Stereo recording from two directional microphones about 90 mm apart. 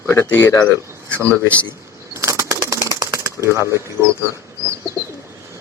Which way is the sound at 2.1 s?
35° right (ahead or behind).